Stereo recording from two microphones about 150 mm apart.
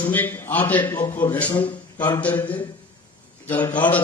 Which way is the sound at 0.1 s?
10° left (ahead or behind).